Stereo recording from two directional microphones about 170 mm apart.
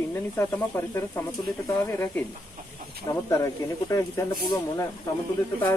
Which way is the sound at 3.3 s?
20° left (ahead or behind).